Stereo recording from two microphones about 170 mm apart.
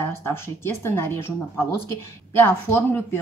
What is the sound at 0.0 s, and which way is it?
Speech, 15° left (ahead or behind).